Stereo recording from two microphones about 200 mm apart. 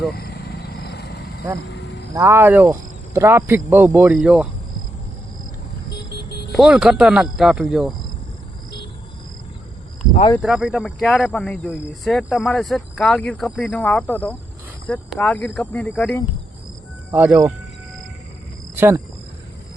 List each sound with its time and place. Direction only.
0.2 s wild animals: 50° left (ahead or behind)
1.7 s a sound: 60° left (ahead or behind)
2.1 s speech: 15° right (ahead or behind)
5.9 s vehicle: 55° left (ahead or behind)
6.5 s speech: 5° right (ahead or behind)
10.3 s speech: centre (ahead or behind)
17.1 s speech: 10° right (ahead or behind)
18.8 s speech: 10° right (ahead or behind)